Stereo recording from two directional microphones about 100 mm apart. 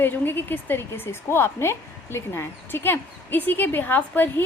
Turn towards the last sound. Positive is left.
turn(degrees=20)  # may be behind; listen again after turning